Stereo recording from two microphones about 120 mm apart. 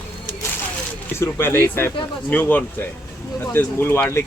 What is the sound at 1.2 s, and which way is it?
Speech, 20° left (ahead or behind).